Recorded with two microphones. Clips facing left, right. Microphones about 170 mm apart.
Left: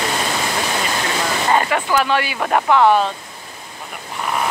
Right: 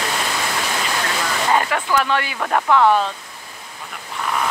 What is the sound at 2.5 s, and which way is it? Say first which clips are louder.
Speech: left 1 dB; 20° left (ahead or behind).